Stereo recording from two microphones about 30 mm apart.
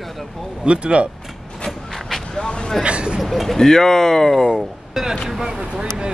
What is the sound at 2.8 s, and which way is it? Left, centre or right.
Speech, right.